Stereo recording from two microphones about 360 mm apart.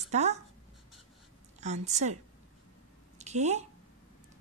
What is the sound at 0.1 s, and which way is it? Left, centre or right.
Speech, centre.